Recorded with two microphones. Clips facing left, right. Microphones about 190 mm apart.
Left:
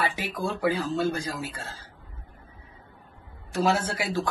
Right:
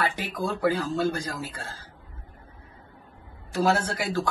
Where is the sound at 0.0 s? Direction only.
10° left (ahead or behind).